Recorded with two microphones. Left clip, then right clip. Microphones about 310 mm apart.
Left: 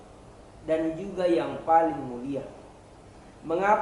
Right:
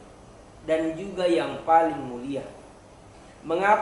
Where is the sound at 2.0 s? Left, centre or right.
Left.